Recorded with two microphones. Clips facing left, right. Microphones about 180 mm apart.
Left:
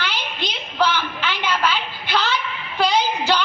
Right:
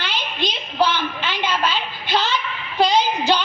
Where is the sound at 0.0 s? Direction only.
20° right (ahead or behind).